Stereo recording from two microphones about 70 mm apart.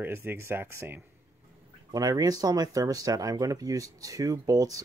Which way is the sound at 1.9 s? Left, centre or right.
Right.